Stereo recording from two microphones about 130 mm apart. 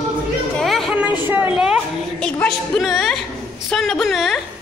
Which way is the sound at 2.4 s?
Centre (ahead or behind).